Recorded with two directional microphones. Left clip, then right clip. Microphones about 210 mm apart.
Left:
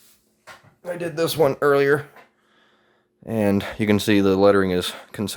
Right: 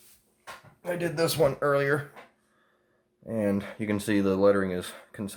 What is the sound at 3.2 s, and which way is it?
Speech, 50° left (ahead or behind).